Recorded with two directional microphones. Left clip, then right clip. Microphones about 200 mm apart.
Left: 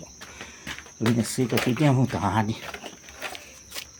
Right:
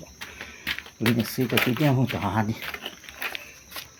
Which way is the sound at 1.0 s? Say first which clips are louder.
Left 1 dB; centre (ahead or behind).